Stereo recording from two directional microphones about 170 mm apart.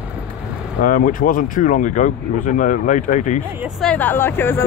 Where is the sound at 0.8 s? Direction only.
55° left (ahead or behind).